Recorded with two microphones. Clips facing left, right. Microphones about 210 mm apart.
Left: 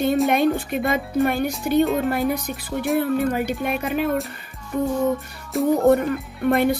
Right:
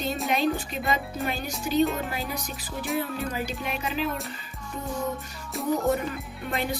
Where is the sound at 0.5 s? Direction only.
55° left (ahead or behind).